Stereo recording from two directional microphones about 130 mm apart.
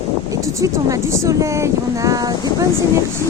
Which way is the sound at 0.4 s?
25° right (ahead or behind).